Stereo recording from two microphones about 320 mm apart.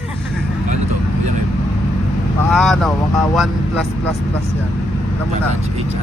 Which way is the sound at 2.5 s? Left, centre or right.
Centre.